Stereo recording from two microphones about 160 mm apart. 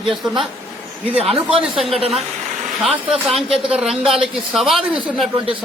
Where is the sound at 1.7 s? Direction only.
Centre (ahead or behind).